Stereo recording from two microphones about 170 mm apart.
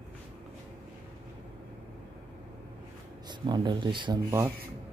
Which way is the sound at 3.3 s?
25° right (ahead or behind).